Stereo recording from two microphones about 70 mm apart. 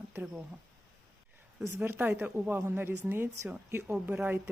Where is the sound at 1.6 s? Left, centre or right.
Right.